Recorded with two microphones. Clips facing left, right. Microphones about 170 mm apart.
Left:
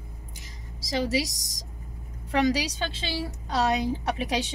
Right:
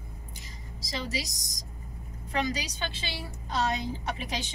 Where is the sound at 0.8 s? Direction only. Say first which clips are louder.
Left 8 dB; 85° left.